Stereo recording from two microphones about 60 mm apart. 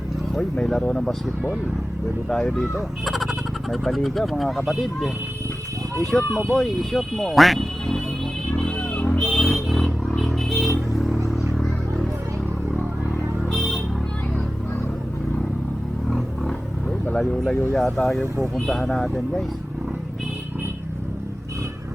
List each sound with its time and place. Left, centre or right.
0.5 s speech: centre
6.0 s speech: centre
8.5 s a sound: left
9.3 s vehicle: centre
11.0 s a sound: centre
16.0 s roaring cats: centre
17.1 s speech: centre